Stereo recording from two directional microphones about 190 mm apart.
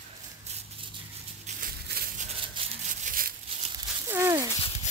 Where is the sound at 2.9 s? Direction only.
45° right (ahead or behind).